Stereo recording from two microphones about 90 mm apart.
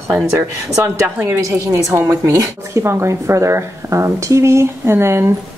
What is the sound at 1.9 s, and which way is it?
Speech, 30° right (ahead or behind).